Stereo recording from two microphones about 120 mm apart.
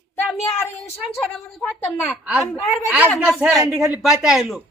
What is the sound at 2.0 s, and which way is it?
Speech, 10° right (ahead or behind).